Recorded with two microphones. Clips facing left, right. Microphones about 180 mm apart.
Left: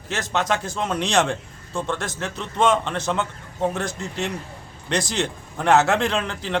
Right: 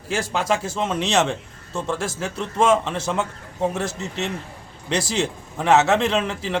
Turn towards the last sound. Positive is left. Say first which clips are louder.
# right 2 dB
turn(degrees=-5)  # may be behind; listen again after turning